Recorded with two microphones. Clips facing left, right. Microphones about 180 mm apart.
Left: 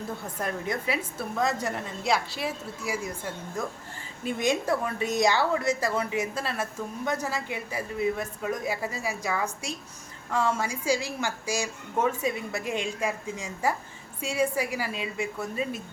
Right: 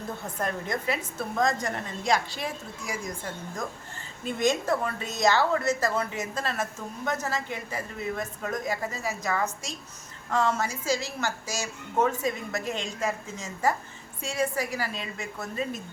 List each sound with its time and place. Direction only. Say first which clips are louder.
0.3 s speech: even; 10° left (ahead or behind)